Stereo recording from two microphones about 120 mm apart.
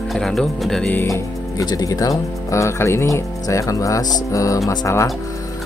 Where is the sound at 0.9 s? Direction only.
20° left (ahead or behind).